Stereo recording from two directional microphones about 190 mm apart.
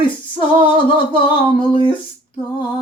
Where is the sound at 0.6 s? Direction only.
25° left (ahead or behind).